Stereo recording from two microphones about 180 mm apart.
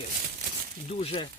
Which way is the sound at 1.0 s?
35° left (ahead or behind).